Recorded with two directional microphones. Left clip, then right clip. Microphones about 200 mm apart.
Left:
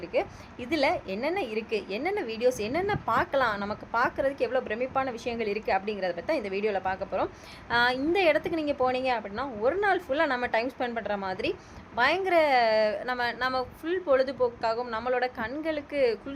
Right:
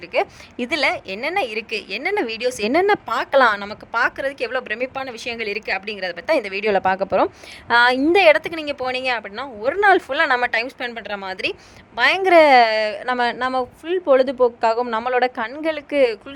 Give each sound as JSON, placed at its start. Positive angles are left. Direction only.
{"t": 0.1, "sound": "a woman's voice", "side_deg": -50}